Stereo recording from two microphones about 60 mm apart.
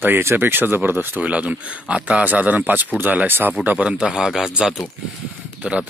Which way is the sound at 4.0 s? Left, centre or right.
Centre.